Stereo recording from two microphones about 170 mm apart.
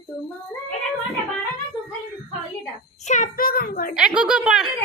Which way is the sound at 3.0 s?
45° left (ahead or behind).